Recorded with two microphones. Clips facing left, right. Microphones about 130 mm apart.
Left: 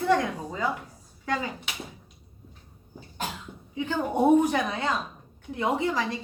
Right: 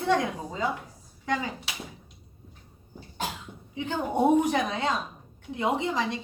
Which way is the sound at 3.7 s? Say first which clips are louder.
Left 1 dB; 20° right (ahead or behind).